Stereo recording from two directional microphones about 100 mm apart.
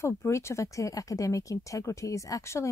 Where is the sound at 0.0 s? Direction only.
25° left (ahead or behind).